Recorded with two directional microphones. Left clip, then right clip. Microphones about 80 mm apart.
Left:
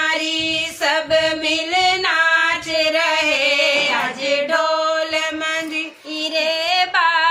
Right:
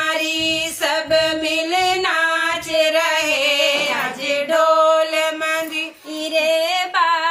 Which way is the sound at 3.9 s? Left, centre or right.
Right.